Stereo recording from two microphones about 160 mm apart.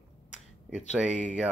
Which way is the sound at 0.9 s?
5° right (ahead or behind).